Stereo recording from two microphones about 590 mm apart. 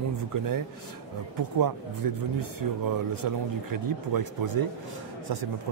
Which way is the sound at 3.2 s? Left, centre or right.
Right.